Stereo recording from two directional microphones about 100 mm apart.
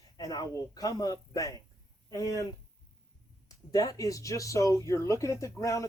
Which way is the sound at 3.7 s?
35° left (ahead or behind).